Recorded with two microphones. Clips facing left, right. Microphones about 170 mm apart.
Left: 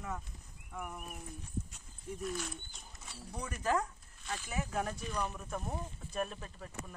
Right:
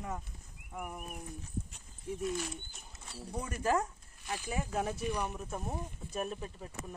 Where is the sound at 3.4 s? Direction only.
25° right (ahead or behind).